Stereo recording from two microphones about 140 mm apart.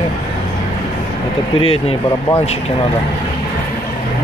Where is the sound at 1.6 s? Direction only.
40° left (ahead or behind).